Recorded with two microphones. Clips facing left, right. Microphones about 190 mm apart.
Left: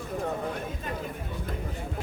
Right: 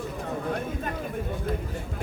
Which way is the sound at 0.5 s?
50° right (ahead or behind).